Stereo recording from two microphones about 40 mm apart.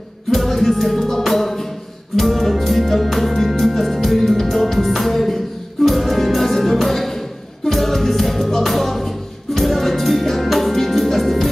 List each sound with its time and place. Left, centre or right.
0.3 s music: centre